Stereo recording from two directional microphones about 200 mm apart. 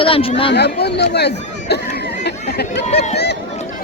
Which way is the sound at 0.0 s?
30° left (ahead or behind).